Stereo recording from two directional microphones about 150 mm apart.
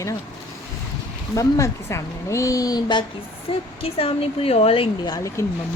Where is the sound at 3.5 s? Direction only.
40° left (ahead or behind).